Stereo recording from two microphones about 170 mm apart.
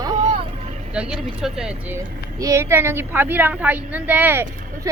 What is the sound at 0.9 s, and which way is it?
Speech, 5° right (ahead or behind).